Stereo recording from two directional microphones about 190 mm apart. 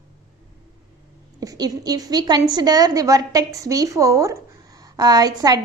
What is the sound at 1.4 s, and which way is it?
A woman's voice, 20° right (ahead or behind).